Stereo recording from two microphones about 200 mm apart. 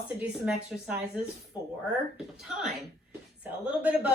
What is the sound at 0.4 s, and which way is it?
A woman's voice, 5° right (ahead or behind).